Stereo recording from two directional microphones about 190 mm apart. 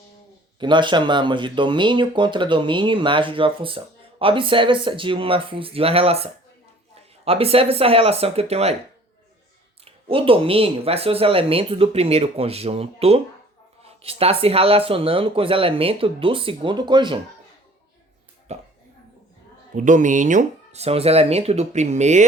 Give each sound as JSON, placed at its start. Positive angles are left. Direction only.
{"t": 0.6, "sound": "speech", "side_deg": -25}
{"t": 9.8, "sound": "speech", "side_deg": -30}
{"t": 18.5, "sound": "speech", "side_deg": -35}
{"t": 19.7, "sound": "speech", "side_deg": -40}